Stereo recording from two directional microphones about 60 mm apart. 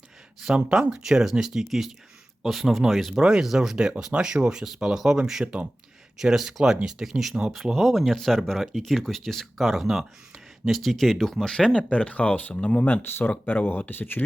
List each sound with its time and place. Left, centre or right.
0.4 s speech: centre; by 14.3 s left